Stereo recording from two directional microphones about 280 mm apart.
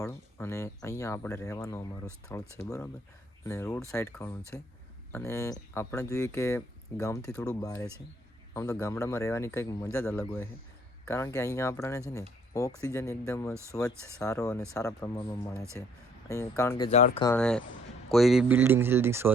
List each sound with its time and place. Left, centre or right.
0.0 s speech: centre
13.5 s speech: centre
14.0 s speech: centre
17.2 s speech: centre